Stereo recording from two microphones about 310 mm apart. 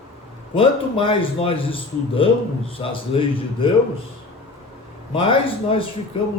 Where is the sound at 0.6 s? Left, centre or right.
Centre.